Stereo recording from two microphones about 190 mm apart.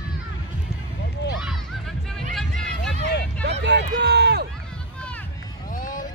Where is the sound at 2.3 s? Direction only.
Centre (ahead or behind).